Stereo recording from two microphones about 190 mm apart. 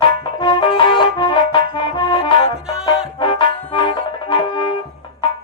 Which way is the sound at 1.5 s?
25° left (ahead or behind).